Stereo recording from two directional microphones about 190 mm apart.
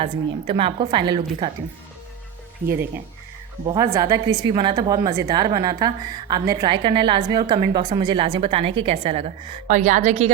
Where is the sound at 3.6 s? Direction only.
20° right (ahead or behind).